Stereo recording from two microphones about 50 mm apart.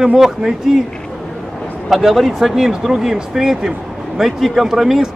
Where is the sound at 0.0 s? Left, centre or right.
Centre.